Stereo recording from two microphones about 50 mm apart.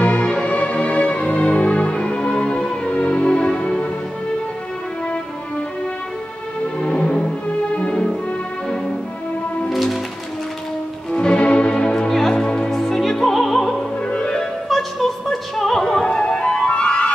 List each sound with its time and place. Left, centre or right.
0.0 s music: left
6.8 s music: left
9.7 s music: centre
11.1 s music: centre
14.1 s music: centre
14.4 s music: centre; by 17.1 s left